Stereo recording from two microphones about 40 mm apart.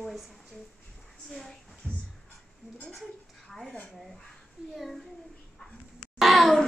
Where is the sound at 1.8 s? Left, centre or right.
Right.